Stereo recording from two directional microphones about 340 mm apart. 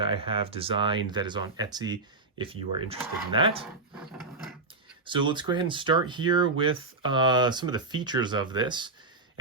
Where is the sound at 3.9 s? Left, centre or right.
Centre.